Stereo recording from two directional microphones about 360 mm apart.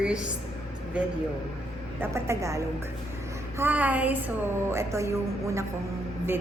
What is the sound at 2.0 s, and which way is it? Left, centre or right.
A woman's voice, centre.